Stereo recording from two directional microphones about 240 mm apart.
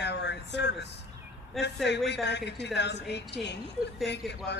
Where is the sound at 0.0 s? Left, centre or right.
Left.